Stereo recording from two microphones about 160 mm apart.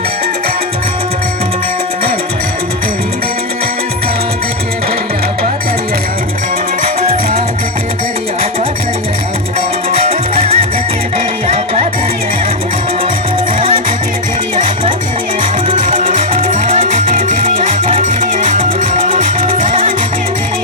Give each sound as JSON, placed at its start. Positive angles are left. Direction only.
{"t": 10.0, "sound": "music", "side_deg": -40}
{"t": 13.6, "sound": "music", "side_deg": -35}
{"t": 15.7, "sound": "music", "side_deg": -55}
{"t": 17.2, "sound": "music", "side_deg": -40}
{"t": 17.9, "sound": "music", "side_deg": -55}